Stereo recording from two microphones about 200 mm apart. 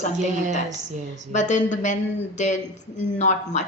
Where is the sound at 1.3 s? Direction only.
40° left (ahead or behind).